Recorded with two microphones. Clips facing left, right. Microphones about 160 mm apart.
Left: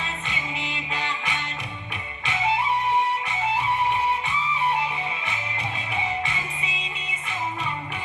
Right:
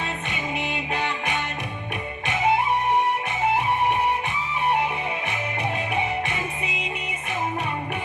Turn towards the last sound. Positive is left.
turn(degrees=-60)  # may be behind; listen again after turning